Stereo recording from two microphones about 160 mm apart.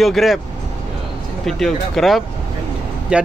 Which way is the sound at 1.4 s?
Centre (ahead or behind).